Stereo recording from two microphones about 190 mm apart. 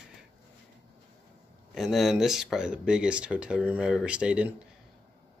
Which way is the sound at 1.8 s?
Centre (ahead or behind).